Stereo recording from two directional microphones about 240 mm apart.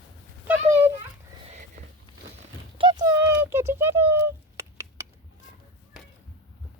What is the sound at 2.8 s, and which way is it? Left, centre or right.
Clip-clop, centre.